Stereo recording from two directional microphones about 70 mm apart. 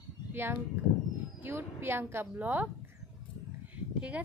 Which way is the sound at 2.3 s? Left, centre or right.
Right.